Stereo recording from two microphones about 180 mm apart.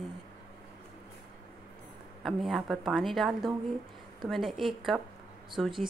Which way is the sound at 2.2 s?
Centre (ahead or behind).